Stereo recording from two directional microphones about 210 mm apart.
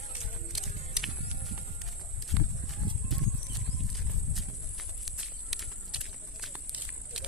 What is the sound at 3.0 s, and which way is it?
Horse, centre (ahead or behind).